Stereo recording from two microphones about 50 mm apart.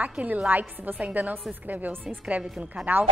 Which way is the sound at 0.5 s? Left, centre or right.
Right.